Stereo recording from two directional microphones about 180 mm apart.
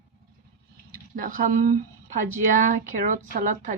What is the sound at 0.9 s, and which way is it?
Speech, 50° right (ahead or behind).